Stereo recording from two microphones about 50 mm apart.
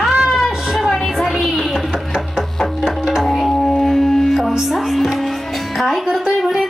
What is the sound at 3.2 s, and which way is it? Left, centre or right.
Music, centre.